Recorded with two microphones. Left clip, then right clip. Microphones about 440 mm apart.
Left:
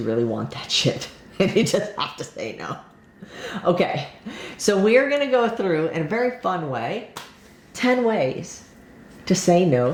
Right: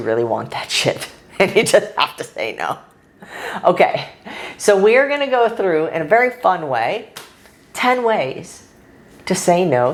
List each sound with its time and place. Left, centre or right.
0.0 s a woman's voice: right
6.5 s a woman's voice: right
7.8 s a woman's voice: right
9.2 s a woman's voice: right